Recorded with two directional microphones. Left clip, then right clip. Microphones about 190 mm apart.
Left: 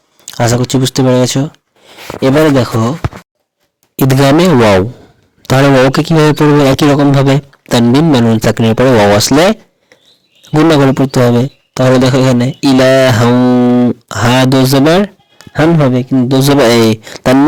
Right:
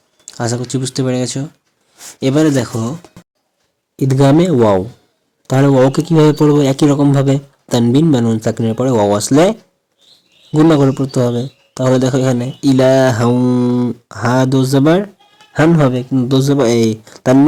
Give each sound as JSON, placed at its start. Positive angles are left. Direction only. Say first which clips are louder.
{"t": 0.3, "sound": "speech", "louder": "left 8 dB", "side_deg": 40}
{"t": 3.9, "sound": "speech", "louder": "left 3 dB", "side_deg": 50}